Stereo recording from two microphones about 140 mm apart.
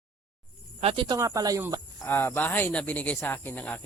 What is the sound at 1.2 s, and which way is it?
Speech, 25° right (ahead or behind).